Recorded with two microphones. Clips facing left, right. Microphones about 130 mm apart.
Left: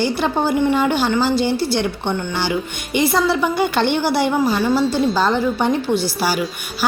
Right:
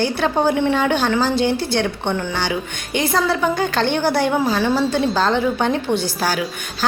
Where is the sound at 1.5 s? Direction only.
55° right (ahead or behind).